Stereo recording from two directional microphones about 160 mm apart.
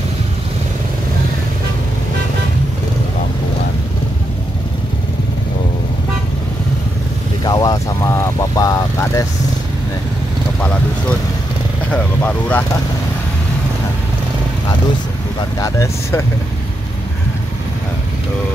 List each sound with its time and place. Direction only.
7.4 s vehicle: 25° left (ahead or behind)
10.6 s vehicle: 10° left (ahead or behind)
15.6 s vehicle: 20° left (ahead or behind)